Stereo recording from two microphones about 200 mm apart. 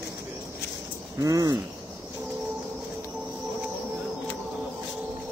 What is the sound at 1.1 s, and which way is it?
Speech, 15° right (ahead or behind).